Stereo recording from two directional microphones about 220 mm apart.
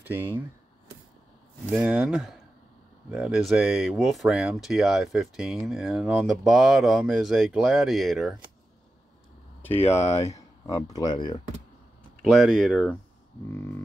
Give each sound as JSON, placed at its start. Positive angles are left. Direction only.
{"t": 0.0, "sound": "speech", "side_deg": -10}
{"t": 1.7, "sound": "speech", "side_deg": -5}
{"t": 10.1, "sound": "speech", "side_deg": 15}
{"t": 12.2, "sound": "speech", "side_deg": 0}